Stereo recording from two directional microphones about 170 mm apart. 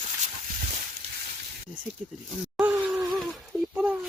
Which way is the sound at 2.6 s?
5° right (ahead or behind).